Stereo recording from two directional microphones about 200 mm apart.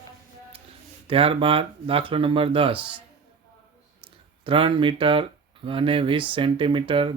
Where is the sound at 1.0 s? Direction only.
25° right (ahead or behind).